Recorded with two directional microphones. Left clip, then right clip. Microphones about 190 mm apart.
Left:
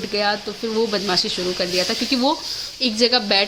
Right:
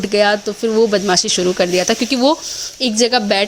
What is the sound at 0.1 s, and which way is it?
A woman's voice, 40° right (ahead or behind).